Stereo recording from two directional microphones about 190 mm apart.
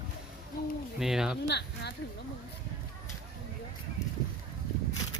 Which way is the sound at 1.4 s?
65° left (ahead or behind).